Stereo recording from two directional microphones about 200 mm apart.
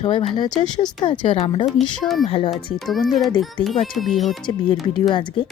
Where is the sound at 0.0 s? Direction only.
25° left (ahead or behind).